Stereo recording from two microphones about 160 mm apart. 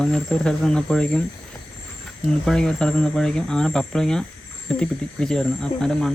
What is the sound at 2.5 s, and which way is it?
Speech, 5° left (ahead or behind).